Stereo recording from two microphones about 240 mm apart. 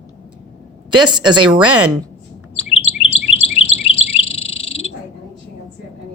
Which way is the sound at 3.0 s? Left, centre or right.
Left.